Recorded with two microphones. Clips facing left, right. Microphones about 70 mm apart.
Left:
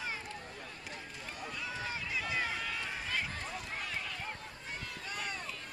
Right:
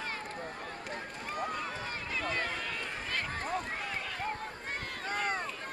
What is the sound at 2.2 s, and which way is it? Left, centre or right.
Run, centre.